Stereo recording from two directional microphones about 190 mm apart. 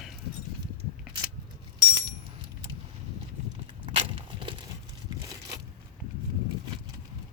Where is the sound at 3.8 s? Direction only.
25° right (ahead or behind).